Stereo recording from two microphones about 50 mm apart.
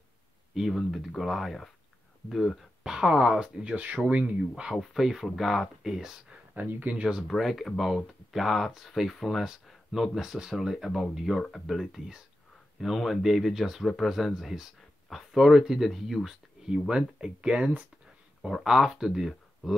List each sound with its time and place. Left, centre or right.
0.6 s speech: centre
2.8 s speech: centre
3.6 s speech: right
4.7 s speech: centre
6.7 s speech: right
7.0 s speech: centre
7.2 s speech: centre
18.5 s speech: centre